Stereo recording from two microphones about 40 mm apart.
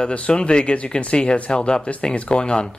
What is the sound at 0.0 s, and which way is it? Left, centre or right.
Speech, left.